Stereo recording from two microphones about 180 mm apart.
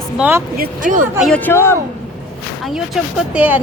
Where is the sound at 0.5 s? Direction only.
50° right (ahead or behind).